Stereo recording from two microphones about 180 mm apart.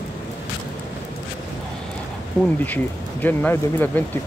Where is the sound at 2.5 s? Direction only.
10° left (ahead or behind).